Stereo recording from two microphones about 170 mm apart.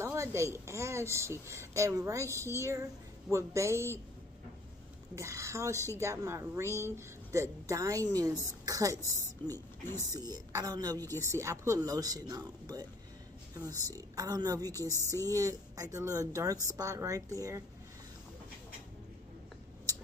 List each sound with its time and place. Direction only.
0.0 s a woman's voice: 15° right (ahead or behind)
5.1 s a woman's voice: 15° right (ahead or behind)
14.8 s a sound: 15° left (ahead or behind)
15.3 s speech: 20° right (ahead or behind)